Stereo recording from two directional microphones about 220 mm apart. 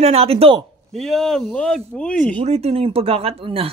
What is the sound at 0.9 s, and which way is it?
Speech, centre (ahead or behind).